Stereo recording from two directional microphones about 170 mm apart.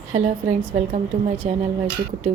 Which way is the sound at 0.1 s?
40° right (ahead or behind).